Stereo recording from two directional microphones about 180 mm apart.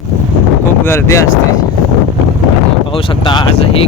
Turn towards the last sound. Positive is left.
turn(degrees=25)  # may be behind; listen again after turning